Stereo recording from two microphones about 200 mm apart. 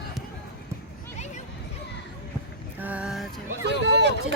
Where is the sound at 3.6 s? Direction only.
60° right (ahead or behind).